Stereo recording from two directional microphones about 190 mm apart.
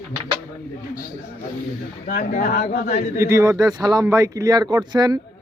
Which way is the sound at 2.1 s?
40° left (ahead or behind).